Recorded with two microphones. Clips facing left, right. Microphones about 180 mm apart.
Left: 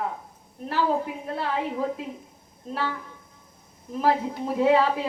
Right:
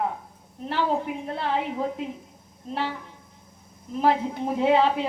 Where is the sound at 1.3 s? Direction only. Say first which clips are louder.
Even; 25° right (ahead or behind).